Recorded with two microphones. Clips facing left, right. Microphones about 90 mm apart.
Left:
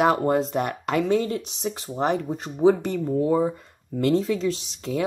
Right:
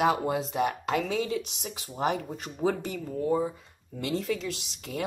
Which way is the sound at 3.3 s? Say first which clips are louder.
Left 5 dB; 65° left (ahead or behind).